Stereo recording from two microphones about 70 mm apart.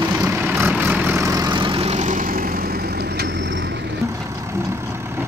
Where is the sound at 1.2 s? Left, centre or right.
Right.